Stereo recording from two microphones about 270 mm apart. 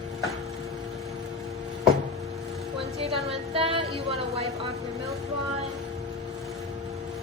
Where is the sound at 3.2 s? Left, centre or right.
Right.